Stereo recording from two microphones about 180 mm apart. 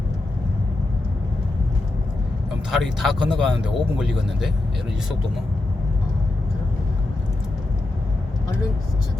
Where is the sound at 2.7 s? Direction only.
Centre (ahead or behind).